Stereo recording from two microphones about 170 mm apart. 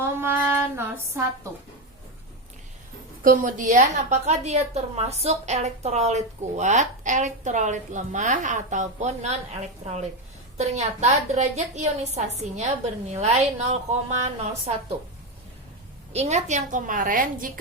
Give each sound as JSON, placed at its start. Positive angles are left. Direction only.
{"t": 0.2, "sound": "music", "side_deg": -10}
{"t": 3.2, "sound": "a woman's voice", "side_deg": -50}
{"t": 16.1, "sound": "a woman's voice", "side_deg": -45}